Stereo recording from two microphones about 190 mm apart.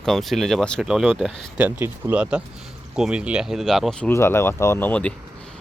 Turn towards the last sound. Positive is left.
turn(degrees=10)  # may be behind; listen again after turning